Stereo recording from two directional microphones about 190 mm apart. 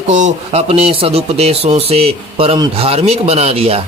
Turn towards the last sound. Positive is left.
turn(degrees=-30)  # may be behind; listen again after turning